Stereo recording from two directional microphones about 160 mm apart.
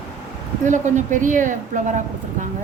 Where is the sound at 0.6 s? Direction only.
50° right (ahead or behind).